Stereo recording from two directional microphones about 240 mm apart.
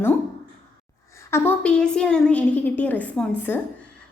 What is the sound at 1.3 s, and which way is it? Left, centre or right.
A woman's voice, centre.